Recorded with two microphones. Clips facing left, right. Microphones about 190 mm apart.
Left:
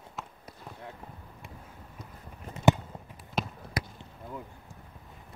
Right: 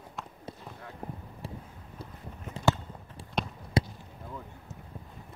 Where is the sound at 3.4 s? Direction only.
Centre (ahead or behind).